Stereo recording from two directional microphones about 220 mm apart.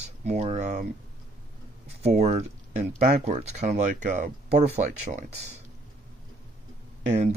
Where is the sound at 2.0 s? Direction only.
30° right (ahead or behind).